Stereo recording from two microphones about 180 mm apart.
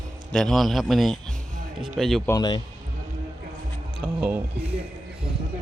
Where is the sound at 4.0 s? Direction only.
5° right (ahead or behind).